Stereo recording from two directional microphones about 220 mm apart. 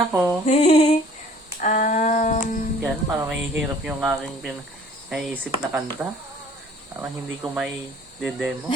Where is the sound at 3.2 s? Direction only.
5° right (ahead or behind).